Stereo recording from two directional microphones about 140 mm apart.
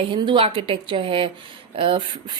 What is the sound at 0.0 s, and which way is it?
A woman's voice, 35° right (ahead or behind).